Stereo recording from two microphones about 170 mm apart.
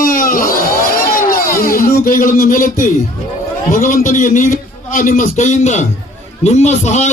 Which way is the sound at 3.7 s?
50° left (ahead or behind).